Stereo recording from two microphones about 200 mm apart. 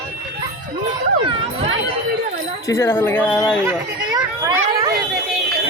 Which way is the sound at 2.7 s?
15° left (ahead or behind).